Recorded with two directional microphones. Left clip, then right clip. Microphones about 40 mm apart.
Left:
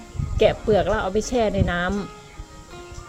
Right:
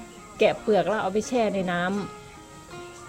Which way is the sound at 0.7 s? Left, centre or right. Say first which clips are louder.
Left 3 dB; left.